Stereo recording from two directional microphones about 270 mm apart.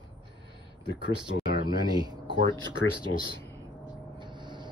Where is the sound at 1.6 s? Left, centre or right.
Centre.